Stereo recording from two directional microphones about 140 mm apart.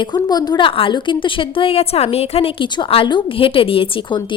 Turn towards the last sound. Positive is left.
turn(degrees=35)  # may be behind; listen again after turning